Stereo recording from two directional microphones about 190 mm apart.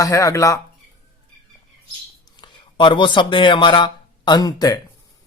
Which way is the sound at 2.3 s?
25° left (ahead or behind).